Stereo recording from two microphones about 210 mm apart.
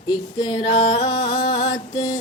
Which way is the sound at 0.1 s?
20° left (ahead or behind).